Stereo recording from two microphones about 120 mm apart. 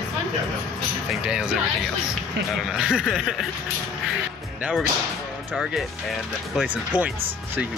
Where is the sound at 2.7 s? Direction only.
5° right (ahead or behind).